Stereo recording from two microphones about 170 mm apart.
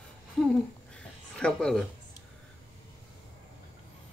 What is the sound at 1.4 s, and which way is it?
Speech, 5° left (ahead or behind).